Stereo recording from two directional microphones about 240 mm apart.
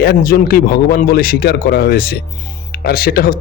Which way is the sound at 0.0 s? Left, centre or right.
Left.